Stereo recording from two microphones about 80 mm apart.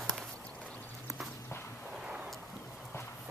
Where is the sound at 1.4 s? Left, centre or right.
Left.